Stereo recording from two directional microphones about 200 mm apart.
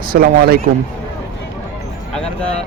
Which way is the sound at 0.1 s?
45° right (ahead or behind).